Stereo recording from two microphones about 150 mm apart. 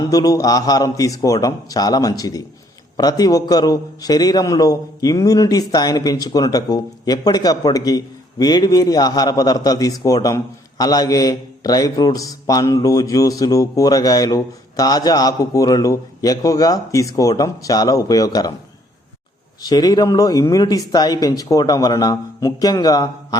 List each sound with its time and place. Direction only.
0.1 s a man's voice: 25° left (ahead or behind)
19.6 s a man's voice: 25° left (ahead or behind)